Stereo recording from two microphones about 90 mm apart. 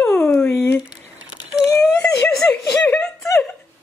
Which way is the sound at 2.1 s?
20° left (ahead or behind).